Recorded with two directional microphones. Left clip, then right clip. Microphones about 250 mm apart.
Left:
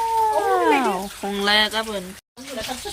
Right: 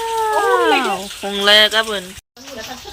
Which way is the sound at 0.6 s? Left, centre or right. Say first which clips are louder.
Right 3 dB; centre.